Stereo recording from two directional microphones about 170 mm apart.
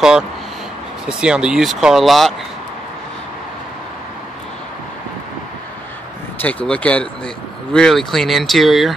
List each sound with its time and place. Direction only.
1.0 s speech: 5° right (ahead or behind)
6.4 s speech: 5° left (ahead or behind)